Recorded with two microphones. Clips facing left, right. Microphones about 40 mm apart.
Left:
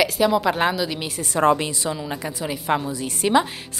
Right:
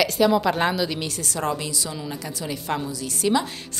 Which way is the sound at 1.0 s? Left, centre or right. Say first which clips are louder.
Left 7 dB; left.